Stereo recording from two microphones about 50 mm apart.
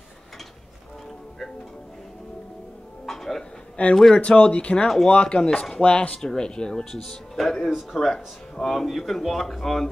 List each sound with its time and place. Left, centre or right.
3.1 s music: centre
3.9 s speech: centre
4.2 s speech: left
4.8 s speech: centre
5.1 s speech: centre
7.7 s speech: centre
8.6 s a man's voice: centre